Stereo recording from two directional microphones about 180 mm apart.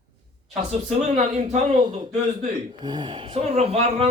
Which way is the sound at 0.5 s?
35° right (ahead or behind).